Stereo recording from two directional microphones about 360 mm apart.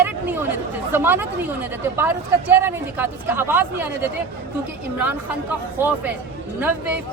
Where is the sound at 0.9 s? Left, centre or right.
Centre.